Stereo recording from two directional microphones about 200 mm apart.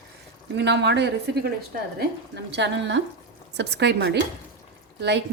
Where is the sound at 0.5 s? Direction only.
60° right (ahead or behind).